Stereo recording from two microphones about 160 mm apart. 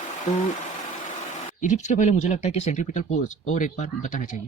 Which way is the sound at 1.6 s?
50° left (ahead or behind).